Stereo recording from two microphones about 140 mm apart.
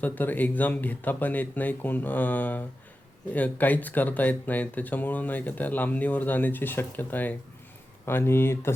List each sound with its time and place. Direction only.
0.0 s speech: 10° left (ahead or behind)